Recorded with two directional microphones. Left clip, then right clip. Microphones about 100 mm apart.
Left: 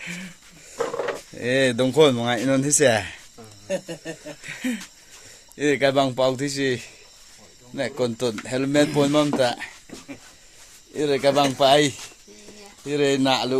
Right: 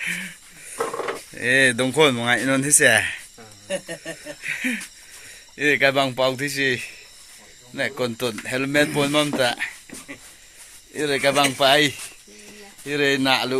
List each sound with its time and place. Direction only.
0.0 s wheeze: 15° left (ahead or behind)
1.4 s speech: 20° left (ahead or behind)
4.4 s speech: 20° left (ahead or behind)
10.9 s speech: 25° left (ahead or behind)